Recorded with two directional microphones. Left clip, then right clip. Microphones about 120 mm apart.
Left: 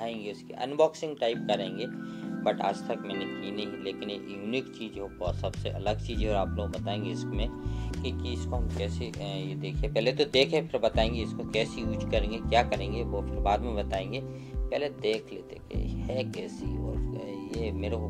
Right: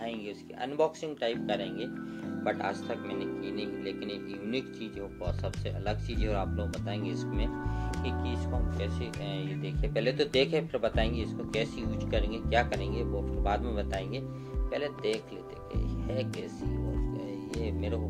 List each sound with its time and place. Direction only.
0.6 s speech: 45° left (ahead or behind)
2.4 s speech: 25° left (ahead or behind)
5.2 s speech: 30° left (ahead or behind)
8.0 s speech: 45° left (ahead or behind)
9.9 s speech: 25° left (ahead or behind)
17.6 s speech: 35° left (ahead or behind)